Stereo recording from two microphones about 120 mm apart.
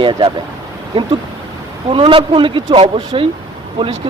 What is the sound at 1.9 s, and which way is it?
Speech, 50° right (ahead or behind).